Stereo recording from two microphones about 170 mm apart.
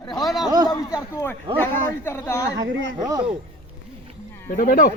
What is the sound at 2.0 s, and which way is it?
Speech, 15° left (ahead or behind).